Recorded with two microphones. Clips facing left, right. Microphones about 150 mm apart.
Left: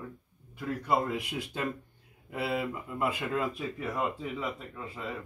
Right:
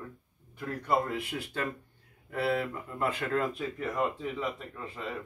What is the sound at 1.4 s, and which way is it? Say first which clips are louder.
Speech: left 1 dB; 15° left (ahead or behind).